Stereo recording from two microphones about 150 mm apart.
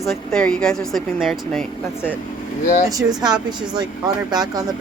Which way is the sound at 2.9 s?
25° right (ahead or behind).